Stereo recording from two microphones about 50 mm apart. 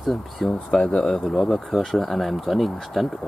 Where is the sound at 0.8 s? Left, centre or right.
Left.